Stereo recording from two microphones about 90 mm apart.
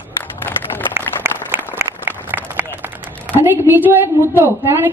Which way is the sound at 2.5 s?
20° right (ahead or behind).